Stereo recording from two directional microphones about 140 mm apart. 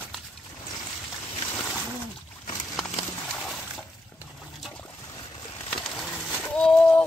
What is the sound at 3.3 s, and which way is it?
Water, centre (ahead or behind).